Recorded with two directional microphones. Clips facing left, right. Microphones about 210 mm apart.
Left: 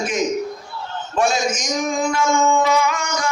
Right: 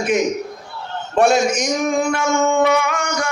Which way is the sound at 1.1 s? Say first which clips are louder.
Right 5 dB; 65° right (ahead or behind).